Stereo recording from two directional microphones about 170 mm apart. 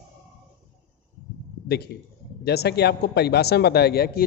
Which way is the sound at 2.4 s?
70° left (ahead or behind).